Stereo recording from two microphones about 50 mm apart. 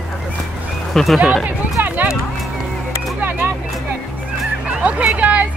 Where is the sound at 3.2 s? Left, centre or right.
Right.